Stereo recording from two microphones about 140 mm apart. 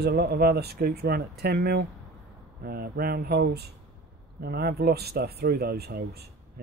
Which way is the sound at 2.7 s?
90° right.